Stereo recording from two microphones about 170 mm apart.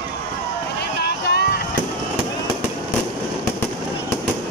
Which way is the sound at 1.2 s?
70° left (ahead or behind).